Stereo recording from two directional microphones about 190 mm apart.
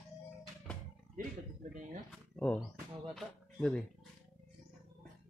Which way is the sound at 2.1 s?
5° left (ahead or behind).